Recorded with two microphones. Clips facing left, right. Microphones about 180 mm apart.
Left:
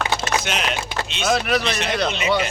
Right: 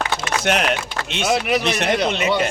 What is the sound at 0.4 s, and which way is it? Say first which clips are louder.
Speech: right 5 dB; 60° right (ahead or behind).